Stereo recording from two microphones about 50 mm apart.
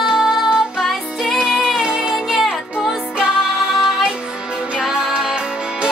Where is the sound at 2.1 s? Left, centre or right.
Centre.